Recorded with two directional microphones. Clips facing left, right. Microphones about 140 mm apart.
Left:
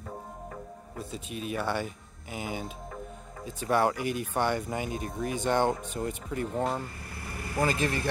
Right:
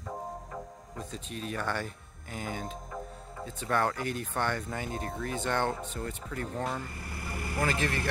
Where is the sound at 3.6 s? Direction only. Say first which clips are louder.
Left 4 dB; 15° left (ahead or behind).